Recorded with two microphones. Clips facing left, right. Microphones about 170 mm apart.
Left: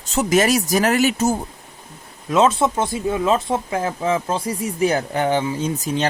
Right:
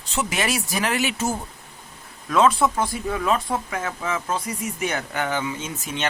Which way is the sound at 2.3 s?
20° left (ahead or behind).